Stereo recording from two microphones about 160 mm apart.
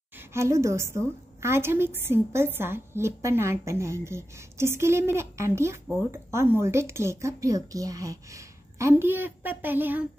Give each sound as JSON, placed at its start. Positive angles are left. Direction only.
{"t": 0.2, "sound": "a woman's voice", "side_deg": -15}